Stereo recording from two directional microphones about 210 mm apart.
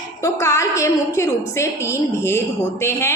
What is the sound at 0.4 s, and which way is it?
A woman's voice, 15° left (ahead or behind).